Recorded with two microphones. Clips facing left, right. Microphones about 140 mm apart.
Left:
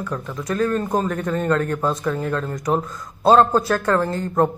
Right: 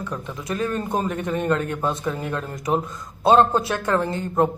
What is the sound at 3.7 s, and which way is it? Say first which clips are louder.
Speech: left 3 dB; 20° right (ahead or behind).